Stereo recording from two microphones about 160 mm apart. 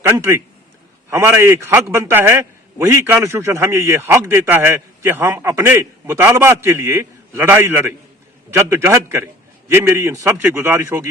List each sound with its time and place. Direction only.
0.0 s a man's voice: 15° right (ahead or behind)